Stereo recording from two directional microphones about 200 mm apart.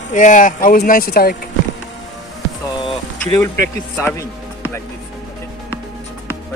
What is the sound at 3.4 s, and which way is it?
Speech, 10° left (ahead or behind).